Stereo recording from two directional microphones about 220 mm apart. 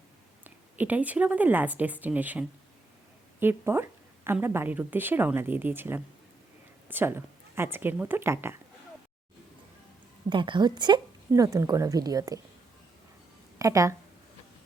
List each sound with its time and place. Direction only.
0.4 s speech: 5° right (ahead or behind)
3.4 s speech: 10° right (ahead or behind)
10.2 s speech: 20° right (ahead or behind)
13.6 s speech: 15° right (ahead or behind)